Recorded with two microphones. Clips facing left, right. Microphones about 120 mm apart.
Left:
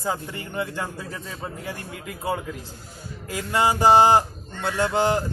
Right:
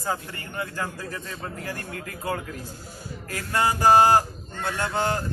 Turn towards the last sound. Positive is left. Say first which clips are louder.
# left 4 dB
turn(degrees=20)  # may be behind; listen again after turning